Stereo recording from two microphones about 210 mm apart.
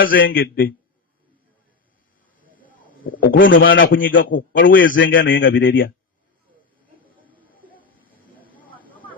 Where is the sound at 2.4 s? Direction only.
40° left (ahead or behind).